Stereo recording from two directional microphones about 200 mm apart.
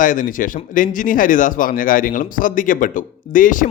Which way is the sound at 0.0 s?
40° left (ahead or behind).